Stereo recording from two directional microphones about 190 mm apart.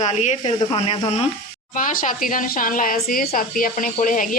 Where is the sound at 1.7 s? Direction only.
45° left (ahead or behind).